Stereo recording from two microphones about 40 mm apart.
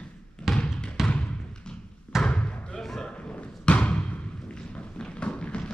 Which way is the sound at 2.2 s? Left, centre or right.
Left.